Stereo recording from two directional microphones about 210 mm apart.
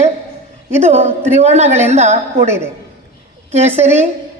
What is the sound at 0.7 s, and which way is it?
Speech, 30° right (ahead or behind).